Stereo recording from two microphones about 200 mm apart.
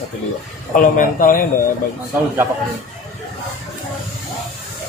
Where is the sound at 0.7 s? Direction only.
40° left (ahead or behind).